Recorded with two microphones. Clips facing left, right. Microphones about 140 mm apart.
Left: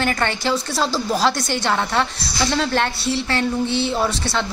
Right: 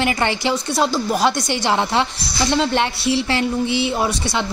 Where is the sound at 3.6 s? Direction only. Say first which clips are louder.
Right 1 dB; 75° right (ahead or behind).